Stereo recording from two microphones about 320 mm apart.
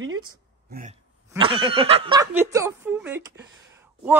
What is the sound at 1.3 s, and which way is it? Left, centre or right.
Speech, centre.